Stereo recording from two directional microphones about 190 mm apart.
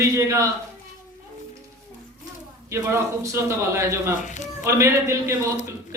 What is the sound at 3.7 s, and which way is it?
Speech, 15° right (ahead or behind).